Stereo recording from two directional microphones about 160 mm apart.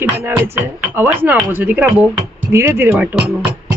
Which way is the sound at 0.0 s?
15° right (ahead or behind).